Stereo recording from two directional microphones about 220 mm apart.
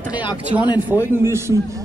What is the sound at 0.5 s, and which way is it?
Speech, 20° right (ahead or behind).